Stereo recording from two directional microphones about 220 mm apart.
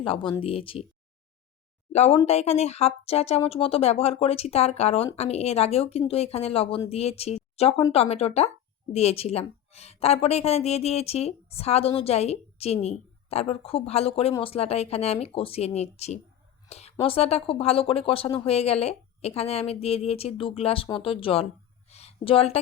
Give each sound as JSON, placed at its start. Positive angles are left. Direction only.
{"t": 0.0, "sound": "a woman's voice", "side_deg": 25}
{"t": 1.9, "sound": "a woman's voice", "side_deg": 30}
{"t": 21.8, "sound": "a sound", "side_deg": 30}